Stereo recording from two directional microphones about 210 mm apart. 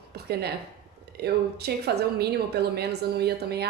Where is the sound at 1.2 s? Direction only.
50° right (ahead or behind).